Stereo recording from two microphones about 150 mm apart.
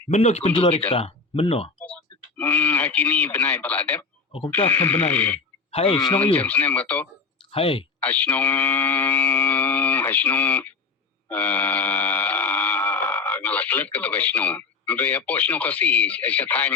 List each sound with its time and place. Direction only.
0.1 s speech: 45° left (ahead or behind)
1.8 s speech: 10° left (ahead or behind)
4.3 s speech: 35° left (ahead or behind)
4.5 s speech: 15° left (ahead or behind)
5.7 s speech: 35° left (ahead or behind)
6.3 s speech: 10° left (ahead or behind)
7.5 s speech: 35° left (ahead or behind)
8.0 s speech: 10° left (ahead or behind)
11.3 s a sound: 10° left (ahead or behind)